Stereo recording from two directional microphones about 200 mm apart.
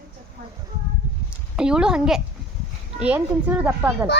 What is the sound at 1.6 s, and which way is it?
A woman's voice, 5° right (ahead or behind).